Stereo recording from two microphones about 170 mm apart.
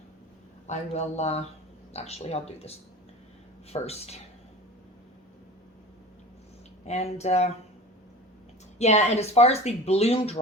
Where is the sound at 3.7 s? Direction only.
35° left (ahead or behind).